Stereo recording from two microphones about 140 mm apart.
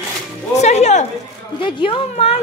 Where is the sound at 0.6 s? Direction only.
55° left (ahead or behind).